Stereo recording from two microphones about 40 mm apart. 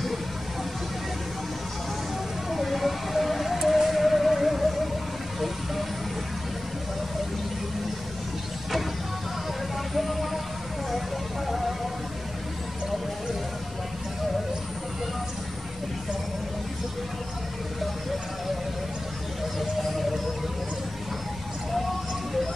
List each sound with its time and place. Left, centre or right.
2.5 s music: centre
9.9 s vehicle: centre
11.4 s music: centre